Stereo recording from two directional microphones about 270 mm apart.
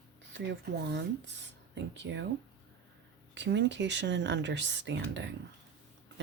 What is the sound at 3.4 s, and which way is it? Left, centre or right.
A woman's voice, right.